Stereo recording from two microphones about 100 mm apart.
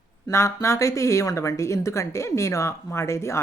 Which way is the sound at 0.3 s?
30° left (ahead or behind).